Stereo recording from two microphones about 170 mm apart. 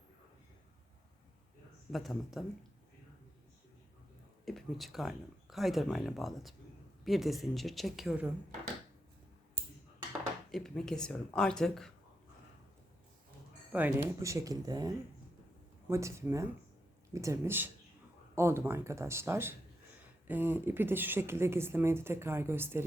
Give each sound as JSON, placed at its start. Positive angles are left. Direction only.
{"t": 1.9, "sound": "speech", "side_deg": 0}
{"t": 4.4, "sound": "speech", "side_deg": 0}
{"t": 10.5, "sound": "speech", "side_deg": 5}
{"t": 13.7, "sound": "speech", "side_deg": -15}